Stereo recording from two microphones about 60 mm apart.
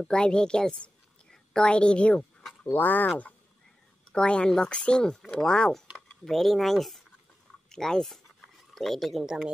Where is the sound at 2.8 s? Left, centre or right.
Left.